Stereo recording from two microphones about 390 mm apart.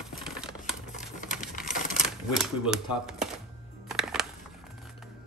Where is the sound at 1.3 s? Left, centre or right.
Centre.